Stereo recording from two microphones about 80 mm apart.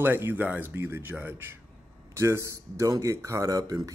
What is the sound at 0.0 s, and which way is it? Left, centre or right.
Speech, right.